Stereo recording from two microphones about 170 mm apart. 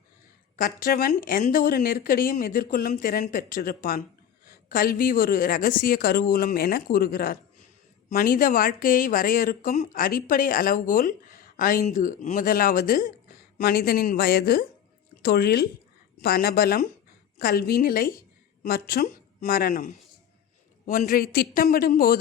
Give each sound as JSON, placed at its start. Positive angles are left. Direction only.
{"t": 0.5, "sound": "speech", "side_deg": 60}
{"t": 9.9, "sound": "speech", "side_deg": 55}